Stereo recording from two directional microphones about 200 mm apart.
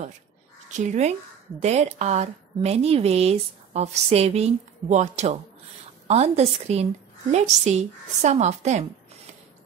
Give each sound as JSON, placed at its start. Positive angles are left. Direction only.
{"t": 0.7, "sound": "a woman's voice", "side_deg": -35}